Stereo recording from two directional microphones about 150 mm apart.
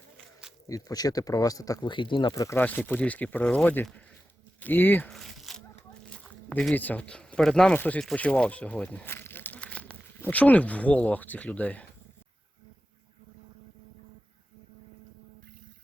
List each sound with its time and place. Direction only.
0.7 s speech: 25° left (ahead or behind)
2.3 s speech: 20° left (ahead or behind)
5.1 s a sound: centre (ahead or behind)
6.1 s speech: 10° left (ahead or behind)